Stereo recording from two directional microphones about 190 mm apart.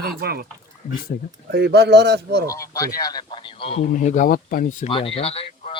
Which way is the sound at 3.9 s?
40° left (ahead or behind).